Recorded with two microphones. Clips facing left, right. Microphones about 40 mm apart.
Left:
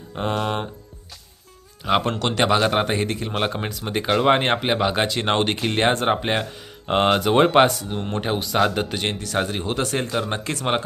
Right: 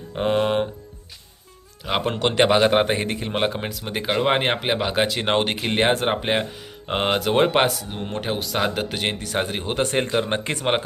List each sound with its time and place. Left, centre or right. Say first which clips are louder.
0.2 s speech: right 4 dB; centre
1.8 s speech: left 3 dB; centre
2.1 s speech: right 2 dB; centre
3.4 s speech: right 1 dB; centre